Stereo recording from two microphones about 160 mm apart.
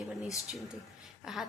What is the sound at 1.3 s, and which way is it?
Speech, 5° right (ahead or behind).